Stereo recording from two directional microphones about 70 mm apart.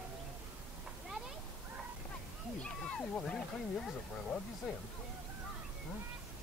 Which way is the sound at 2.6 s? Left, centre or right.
Centre.